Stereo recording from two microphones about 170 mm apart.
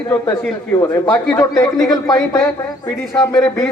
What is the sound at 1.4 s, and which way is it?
A man's voice, 20° left (ahead or behind).